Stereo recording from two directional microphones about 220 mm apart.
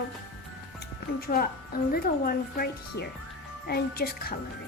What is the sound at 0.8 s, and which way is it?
A woman's voice, 45° left (ahead or behind).